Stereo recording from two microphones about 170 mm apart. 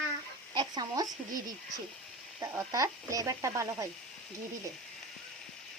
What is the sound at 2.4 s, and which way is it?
Speech, 20° right (ahead or behind).